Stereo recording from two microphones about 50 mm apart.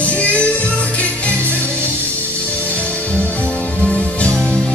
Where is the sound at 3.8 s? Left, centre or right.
Left.